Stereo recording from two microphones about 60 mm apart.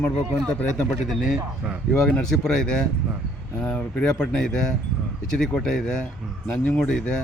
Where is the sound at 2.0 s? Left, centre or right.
Centre.